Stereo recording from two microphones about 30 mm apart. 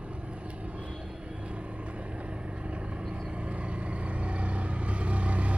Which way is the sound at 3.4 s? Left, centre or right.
Right.